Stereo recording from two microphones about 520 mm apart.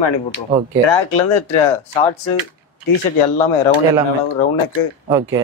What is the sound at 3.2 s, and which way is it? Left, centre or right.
Speech, left.